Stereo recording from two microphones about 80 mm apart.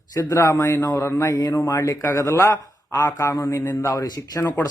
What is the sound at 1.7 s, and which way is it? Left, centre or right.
Speech, left.